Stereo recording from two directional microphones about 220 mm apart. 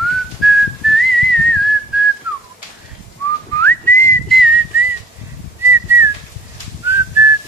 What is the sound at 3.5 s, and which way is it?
Whistling, 10° left (ahead or behind).